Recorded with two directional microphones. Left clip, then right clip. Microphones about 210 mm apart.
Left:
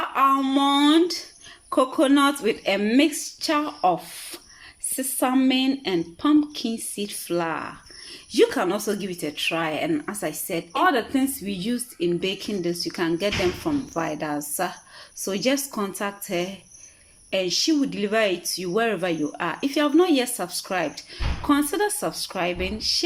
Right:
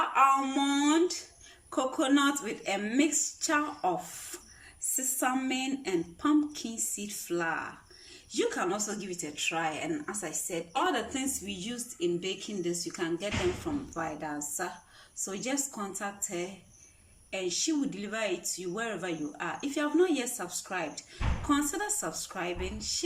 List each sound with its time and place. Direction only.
0.6 s a sound: 25° left (ahead or behind)
1.7 s speech: 25° left (ahead or behind)
4.9 s speech: 25° left (ahead or behind)